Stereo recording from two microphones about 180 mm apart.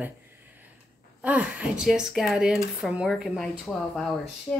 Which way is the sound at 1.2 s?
5° right (ahead or behind).